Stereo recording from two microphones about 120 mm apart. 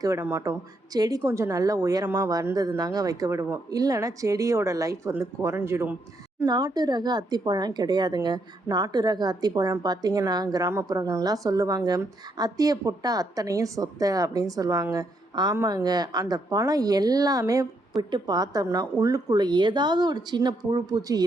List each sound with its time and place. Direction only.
0.0 s a woman's voice: 25° right (ahead or behind)
6.4 s a woman's voice: 35° right (ahead or behind)